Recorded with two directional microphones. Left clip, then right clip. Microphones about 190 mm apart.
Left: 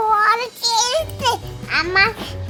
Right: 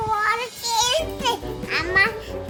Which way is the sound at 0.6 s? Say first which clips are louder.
Left 2 dB; 10° left (ahead or behind).